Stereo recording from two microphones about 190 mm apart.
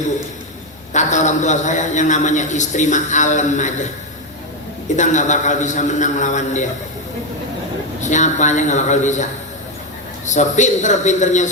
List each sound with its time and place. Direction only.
0.9 s a man's voice: 40° left (ahead or behind)
4.9 s a man's voice: 40° left (ahead or behind)
8.0 s a man's voice: 40° left (ahead or behind)
10.2 s a man's voice: 40° left (ahead or behind)